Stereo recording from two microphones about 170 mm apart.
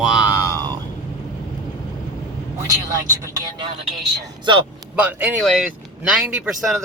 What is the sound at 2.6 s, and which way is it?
Speech, 20° right (ahead or behind).